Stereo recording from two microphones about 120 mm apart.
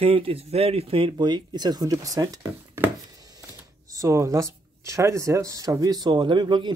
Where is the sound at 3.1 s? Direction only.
30° right (ahead or behind).